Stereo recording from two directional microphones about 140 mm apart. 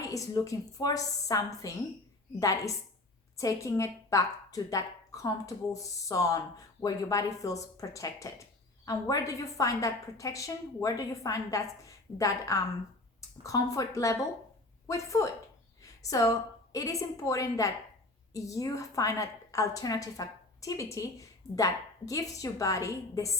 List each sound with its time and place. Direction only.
0.0 s a woman's voice: 25° left (ahead or behind)
15.8 s a sound: 25° left (ahead or behind)
16.7 s a woman's voice: 25° left (ahead or behind)